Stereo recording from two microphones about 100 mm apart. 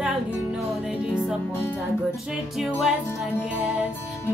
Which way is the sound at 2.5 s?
Centre (ahead or behind).